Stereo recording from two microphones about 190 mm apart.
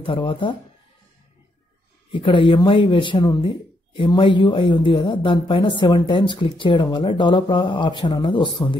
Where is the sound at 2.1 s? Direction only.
25° left (ahead or behind).